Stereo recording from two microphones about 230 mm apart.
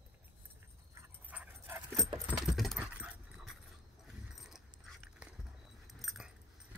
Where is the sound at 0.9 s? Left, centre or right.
Centre.